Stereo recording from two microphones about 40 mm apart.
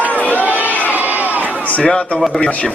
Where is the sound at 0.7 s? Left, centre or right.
Left.